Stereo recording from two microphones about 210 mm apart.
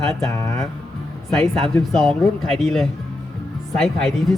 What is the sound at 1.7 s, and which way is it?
Speech, centre (ahead or behind).